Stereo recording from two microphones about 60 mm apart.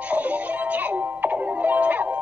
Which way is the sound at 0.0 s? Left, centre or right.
Right.